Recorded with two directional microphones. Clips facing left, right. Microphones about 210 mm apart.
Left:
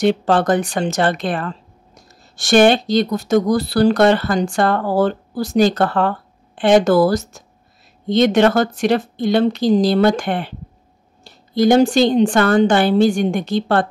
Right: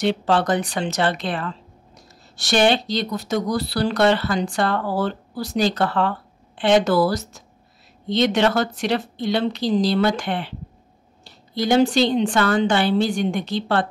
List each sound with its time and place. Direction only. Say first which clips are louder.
0.0 s speech: left 4 dB; 50° left (ahead or behind)